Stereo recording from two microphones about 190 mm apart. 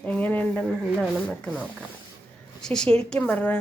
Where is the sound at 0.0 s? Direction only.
10° left (ahead or behind).